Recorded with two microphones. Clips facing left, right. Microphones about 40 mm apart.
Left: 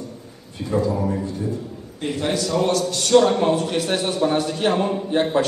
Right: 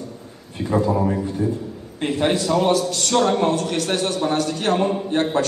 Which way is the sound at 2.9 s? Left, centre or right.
Centre.